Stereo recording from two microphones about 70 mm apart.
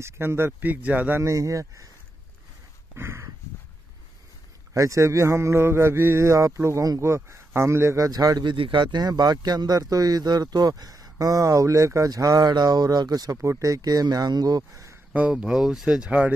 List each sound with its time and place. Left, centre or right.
0.0 s speech: right
1.2 s speech: right
3.0 s a man's voice: right
4.7 s a man's voice: right
8.1 s speech: right
8.9 s speech: right
13.4 s speech: right
15.3 s speech: centre
16.1 s speech: right